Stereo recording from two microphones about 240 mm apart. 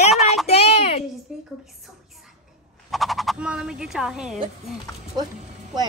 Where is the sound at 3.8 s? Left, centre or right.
Centre.